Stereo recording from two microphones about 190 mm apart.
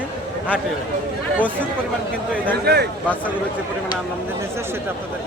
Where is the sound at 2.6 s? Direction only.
60° right (ahead or behind).